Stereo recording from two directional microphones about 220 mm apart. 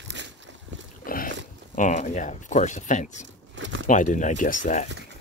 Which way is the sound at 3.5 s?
60° right (ahead or behind).